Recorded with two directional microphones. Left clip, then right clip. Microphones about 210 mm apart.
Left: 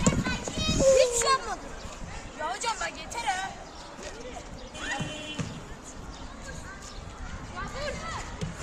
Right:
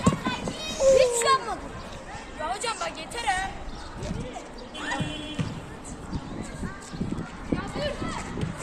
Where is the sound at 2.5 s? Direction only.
25° right (ahead or behind).